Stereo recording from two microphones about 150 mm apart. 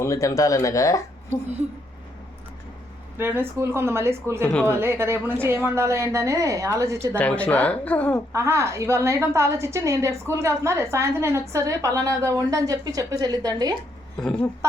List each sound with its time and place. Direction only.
0.0 s speech: 20° left (ahead or behind)
3.2 s a woman's voice: 15° right (ahead or behind)
7.2 s speech: 10° left (ahead or behind)
8.3 s a woman's voice: 20° right (ahead or behind)
14.2 s speech: 5° left (ahead or behind)
14.6 s a woman's voice: 20° right (ahead or behind)